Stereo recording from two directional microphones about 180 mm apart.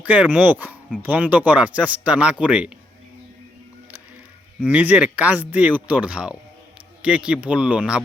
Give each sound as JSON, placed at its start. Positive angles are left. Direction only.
{"t": 0.1, "sound": "speech", "side_deg": -10}
{"t": 4.7, "sound": "speech", "side_deg": -10}